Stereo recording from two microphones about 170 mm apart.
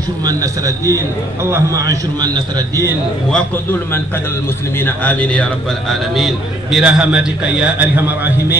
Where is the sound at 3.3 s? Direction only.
10° left (ahead or behind).